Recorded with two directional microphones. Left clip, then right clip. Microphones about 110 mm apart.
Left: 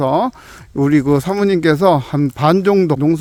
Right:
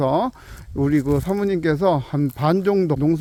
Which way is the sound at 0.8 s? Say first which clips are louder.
Left 6 dB; 90° left.